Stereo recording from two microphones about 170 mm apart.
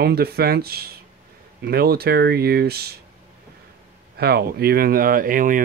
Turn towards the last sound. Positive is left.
turn(degrees=-55)  # may be behind; listen again after turning